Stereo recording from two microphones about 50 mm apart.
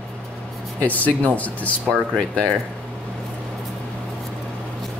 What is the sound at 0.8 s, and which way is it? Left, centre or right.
Speech, left.